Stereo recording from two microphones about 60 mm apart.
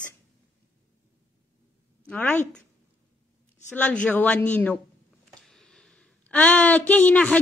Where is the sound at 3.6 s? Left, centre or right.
Left.